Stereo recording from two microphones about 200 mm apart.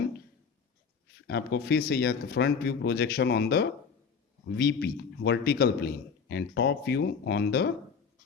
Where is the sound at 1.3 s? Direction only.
55° left (ahead or behind).